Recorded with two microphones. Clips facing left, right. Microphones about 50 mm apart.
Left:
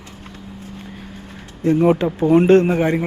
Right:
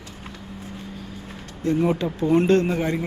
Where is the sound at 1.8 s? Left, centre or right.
Left.